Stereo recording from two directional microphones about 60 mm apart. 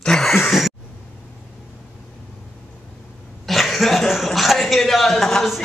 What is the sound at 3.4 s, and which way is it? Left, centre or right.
Speech, centre.